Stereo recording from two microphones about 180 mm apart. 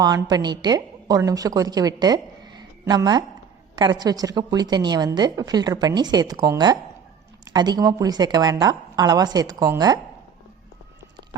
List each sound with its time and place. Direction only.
0.0 s a woman's voice: 20° right (ahead or behind)